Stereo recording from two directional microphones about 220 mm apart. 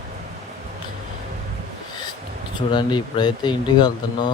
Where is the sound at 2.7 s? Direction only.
20° left (ahead or behind).